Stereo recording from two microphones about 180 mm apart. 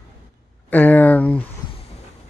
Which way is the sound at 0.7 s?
10° left (ahead or behind).